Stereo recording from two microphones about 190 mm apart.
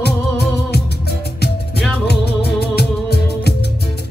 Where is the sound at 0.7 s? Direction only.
60° left (ahead or behind).